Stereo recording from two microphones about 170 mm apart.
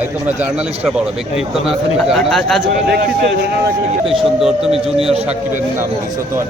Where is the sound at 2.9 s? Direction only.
65° right (ahead or behind).